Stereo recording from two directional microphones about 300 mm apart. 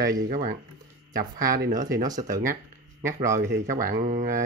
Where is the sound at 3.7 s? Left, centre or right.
Right.